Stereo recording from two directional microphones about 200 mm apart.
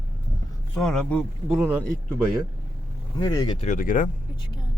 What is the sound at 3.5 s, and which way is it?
Speech, 40° left (ahead or behind).